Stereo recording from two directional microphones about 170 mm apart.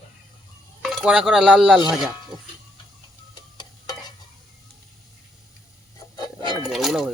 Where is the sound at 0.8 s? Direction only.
Centre (ahead or behind).